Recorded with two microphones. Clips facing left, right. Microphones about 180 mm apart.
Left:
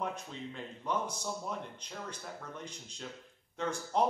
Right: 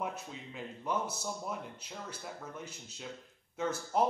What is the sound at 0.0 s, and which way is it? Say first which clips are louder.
Speech: left 1 dB; 10° right (ahead or behind).